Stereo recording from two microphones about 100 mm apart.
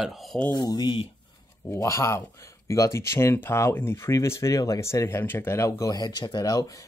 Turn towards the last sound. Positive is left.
turn(degrees=35)  # may be behind; listen again after turning